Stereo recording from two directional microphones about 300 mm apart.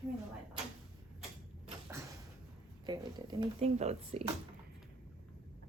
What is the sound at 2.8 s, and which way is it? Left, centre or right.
Speech, centre.